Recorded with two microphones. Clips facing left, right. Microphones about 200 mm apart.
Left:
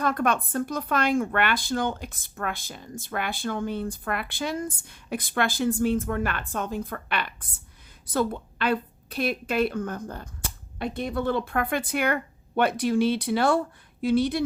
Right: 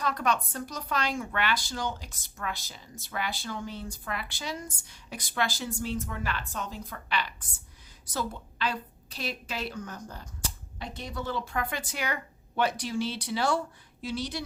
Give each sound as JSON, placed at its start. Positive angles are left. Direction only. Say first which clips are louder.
{"t": 0.0, "sound": "a woman's voice", "louder": "left 4 dB", "side_deg": 55}